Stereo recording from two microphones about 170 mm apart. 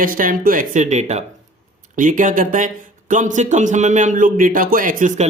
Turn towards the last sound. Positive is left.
turn(degrees=-50)  # may be behind; listen again after turning